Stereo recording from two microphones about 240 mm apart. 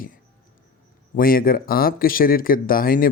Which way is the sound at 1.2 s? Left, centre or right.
Left.